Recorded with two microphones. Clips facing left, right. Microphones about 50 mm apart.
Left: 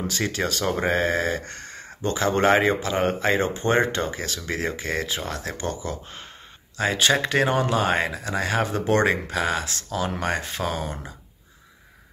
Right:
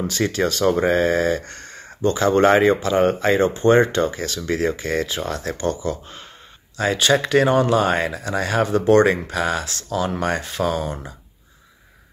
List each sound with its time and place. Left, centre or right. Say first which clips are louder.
0.0 s speech: right 5 dB; centre; by 6.2 s left
6.8 s speech: right 3 dB; centre